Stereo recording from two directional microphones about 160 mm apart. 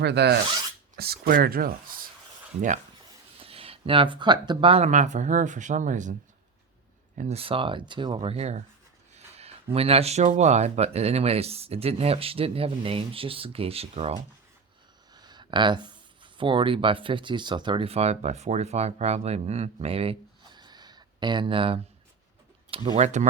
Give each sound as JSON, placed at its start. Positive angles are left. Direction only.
{"t": 0.0, "sound": "speech", "side_deg": -90}
{"t": 0.9, "sound": "speech", "side_deg": -75}
{"t": 2.6, "sound": "speech", "side_deg": -50}
{"t": 3.4, "sound": "speech", "side_deg": -35}
{"t": 4.9, "sound": "speech", "side_deg": -50}
{"t": 7.2, "sound": "speech", "side_deg": -40}
{"t": 9.1, "sound": "a sound", "side_deg": -40}
{"t": 9.7, "sound": "speech", "side_deg": -40}
{"t": 15.1, "sound": "speech", "side_deg": -25}
{"t": 23.0, "sound": "speech", "side_deg": -45}